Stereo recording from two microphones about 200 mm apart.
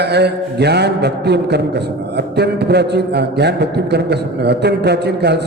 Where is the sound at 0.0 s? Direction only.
55° right (ahead or behind).